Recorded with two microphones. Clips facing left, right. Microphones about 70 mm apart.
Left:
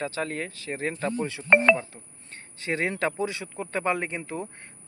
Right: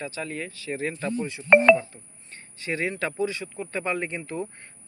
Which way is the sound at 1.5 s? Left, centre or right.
Centre.